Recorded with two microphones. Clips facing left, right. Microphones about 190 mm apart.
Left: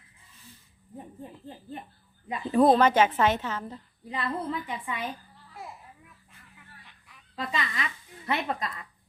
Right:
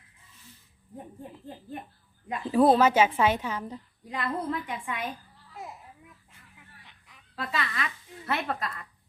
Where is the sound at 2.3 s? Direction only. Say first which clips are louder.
Even; 5° right (ahead or behind).